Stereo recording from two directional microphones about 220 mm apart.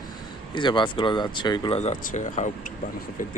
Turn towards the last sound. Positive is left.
turn(degrees=35)  # may be behind; listen again after turning